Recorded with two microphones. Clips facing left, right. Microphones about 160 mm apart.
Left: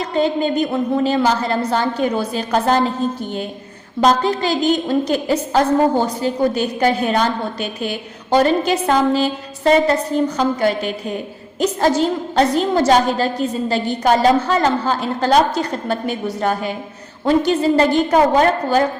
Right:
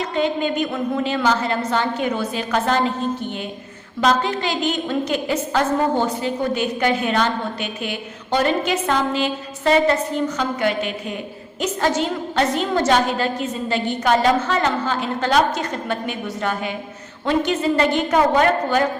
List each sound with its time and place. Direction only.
0.1 s a woman's voice: 35° left (ahead or behind)
4.0 s a woman's voice: 35° left (ahead or behind)